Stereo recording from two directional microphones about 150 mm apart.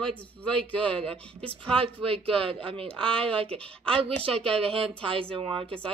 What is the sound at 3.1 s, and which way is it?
Speech, 40° right (ahead or behind).